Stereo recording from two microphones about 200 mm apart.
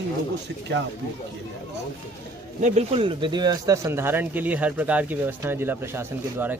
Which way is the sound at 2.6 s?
30° right (ahead or behind).